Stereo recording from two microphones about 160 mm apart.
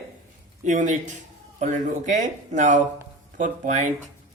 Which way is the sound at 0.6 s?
50° right (ahead or behind).